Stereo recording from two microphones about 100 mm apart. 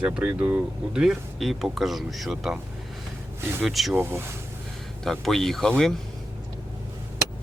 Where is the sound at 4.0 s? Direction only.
25° right (ahead or behind).